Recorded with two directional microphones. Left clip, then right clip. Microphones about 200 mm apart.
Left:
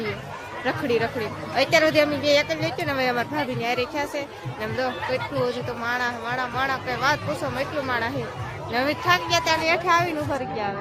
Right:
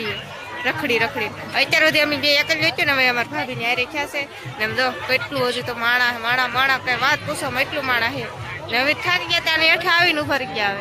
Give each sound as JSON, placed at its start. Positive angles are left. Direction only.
{"t": 0.6, "sound": "speech", "side_deg": 10}
{"t": 3.6, "sound": "a woman's voice", "side_deg": 20}